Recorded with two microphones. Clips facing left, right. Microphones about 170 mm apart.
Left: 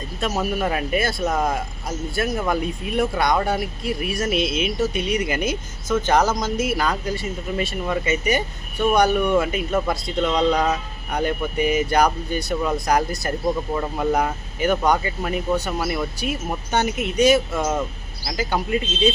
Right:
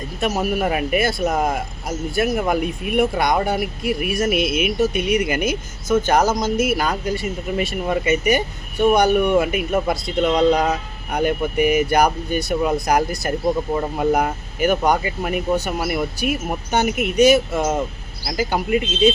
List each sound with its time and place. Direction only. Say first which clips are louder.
0.2 s speech: right 3 dB; 10° right (ahead or behind)
11.5 s speech: right 3 dB; 55° right (ahead or behind)
11.9 s speech: right 2 dB; 10° right (ahead or behind)